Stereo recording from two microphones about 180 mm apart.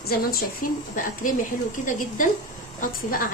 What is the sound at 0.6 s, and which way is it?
A woman's voice, 50° left (ahead or behind).